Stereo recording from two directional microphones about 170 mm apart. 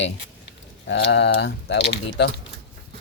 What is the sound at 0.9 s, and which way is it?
Speech, 85° left.